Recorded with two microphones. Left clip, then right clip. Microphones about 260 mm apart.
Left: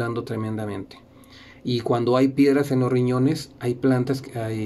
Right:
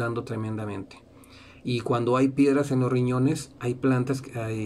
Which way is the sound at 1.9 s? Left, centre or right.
Centre.